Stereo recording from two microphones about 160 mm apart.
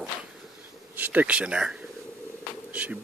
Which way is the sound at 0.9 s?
10° right (ahead or behind).